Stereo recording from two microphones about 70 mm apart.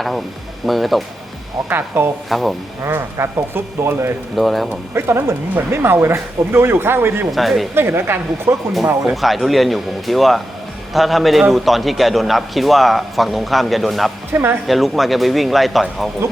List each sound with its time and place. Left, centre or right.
0.6 s a man's voice: centre
2.0 s speech: right
2.3 s a man's voice: centre
2.8 s speech: right
4.4 s a man's voice: centre
4.9 s speech: right
7.3 s a man's voice: centre
7.8 s speech: right
9.2 s a man's voice: centre
14.3 s speech: right
14.7 s a man's voice: centre